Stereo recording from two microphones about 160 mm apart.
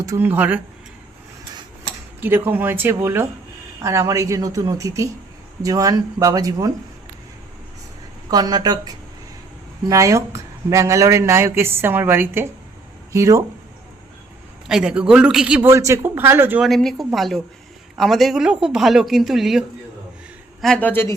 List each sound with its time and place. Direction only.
0.0 s speech: 15° right (ahead or behind)
2.2 s speech: 10° right (ahead or behind)
8.3 s speech: 25° right (ahead or behind)
14.7 s a woman's voice: 5° right (ahead or behind)
15.7 s speech: 20° right (ahead or behind)
16.6 s a woman's voice: centre (ahead or behind)